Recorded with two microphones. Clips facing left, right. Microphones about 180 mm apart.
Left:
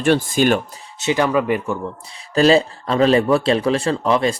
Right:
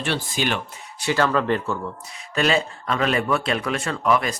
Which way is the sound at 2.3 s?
35° left (ahead or behind).